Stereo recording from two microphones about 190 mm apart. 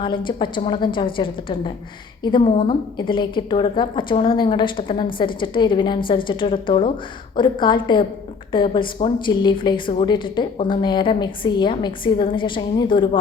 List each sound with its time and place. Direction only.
0.0 s a woman's voice: 25° left (ahead or behind)